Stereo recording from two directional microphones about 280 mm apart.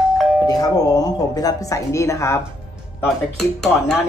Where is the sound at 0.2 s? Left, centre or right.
Centre.